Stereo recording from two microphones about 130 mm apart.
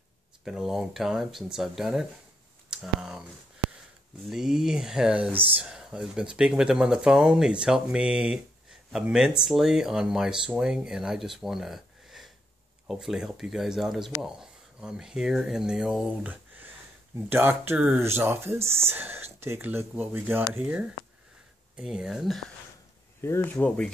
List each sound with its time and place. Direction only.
0.5 s speech: 5° right (ahead or behind)
4.3 s speech: 5° right (ahead or behind)
23.2 s speech: 15° left (ahead or behind)